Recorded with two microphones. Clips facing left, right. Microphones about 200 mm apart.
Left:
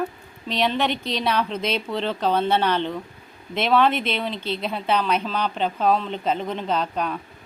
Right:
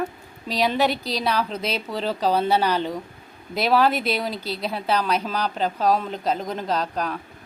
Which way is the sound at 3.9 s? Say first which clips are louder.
Right 1 dB; 40° right (ahead or behind).